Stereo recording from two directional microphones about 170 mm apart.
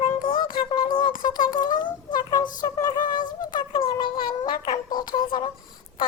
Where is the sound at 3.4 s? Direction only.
25° left (ahead or behind).